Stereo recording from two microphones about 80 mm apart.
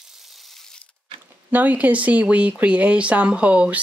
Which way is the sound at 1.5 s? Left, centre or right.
Centre.